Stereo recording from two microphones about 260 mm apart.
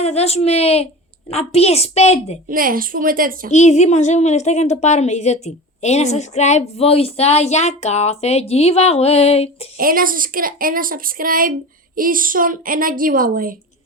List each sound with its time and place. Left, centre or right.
0.0 s a woman's voice: left
2.5 s speech: right
3.5 s a woman's voice: left
9.7 s speech: right